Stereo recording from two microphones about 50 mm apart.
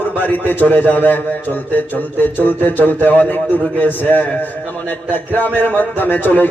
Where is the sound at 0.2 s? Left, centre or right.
Left.